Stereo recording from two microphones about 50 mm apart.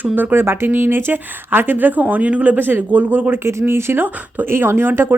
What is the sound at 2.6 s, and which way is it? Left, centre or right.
Speech, right.